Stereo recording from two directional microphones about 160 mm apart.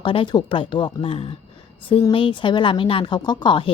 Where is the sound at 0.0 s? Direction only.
30° left (ahead or behind).